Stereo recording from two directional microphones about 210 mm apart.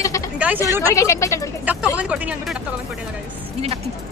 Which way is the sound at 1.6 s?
10° right (ahead or behind).